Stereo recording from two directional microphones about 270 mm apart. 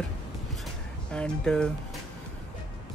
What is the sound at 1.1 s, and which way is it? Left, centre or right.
Speech, centre.